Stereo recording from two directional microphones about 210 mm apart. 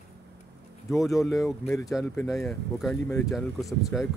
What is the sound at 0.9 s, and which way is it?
Speech, centre (ahead or behind).